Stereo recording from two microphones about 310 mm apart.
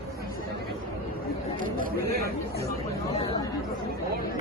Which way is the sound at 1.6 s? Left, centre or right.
Right.